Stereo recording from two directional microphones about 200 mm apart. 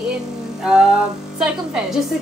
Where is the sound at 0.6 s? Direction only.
5° right (ahead or behind).